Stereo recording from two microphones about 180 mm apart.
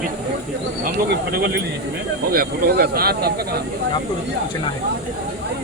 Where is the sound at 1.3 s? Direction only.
60° right (ahead or behind).